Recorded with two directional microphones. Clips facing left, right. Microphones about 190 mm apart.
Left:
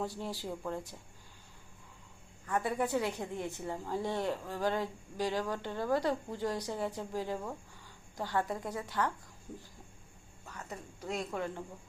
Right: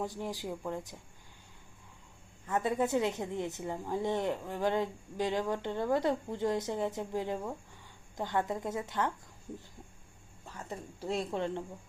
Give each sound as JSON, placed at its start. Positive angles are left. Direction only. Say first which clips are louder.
{"t": 0.0, "sound": "speech", "louder": "right 1 dB", "side_deg": -15}
{"t": 2.5, "sound": "a woman's voice", "louder": "right 2 dB", "side_deg": -20}
{"t": 10.4, "sound": "speech", "louder": "right 3 dB", "side_deg": -25}